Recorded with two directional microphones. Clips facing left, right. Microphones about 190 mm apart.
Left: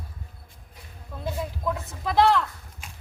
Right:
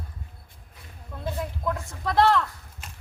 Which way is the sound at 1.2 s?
5° left (ahead or behind).